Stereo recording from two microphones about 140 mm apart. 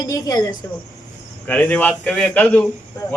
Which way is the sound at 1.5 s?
10° left (ahead or behind).